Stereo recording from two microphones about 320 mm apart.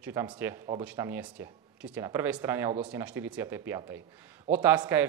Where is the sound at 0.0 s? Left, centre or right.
Centre.